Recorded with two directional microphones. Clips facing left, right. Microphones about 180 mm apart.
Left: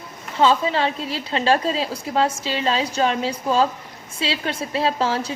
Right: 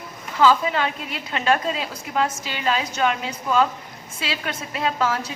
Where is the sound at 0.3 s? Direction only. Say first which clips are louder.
Even; 30° left (ahead or behind).